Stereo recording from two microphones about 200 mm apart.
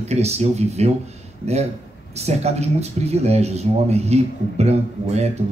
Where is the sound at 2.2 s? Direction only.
30° right (ahead or behind).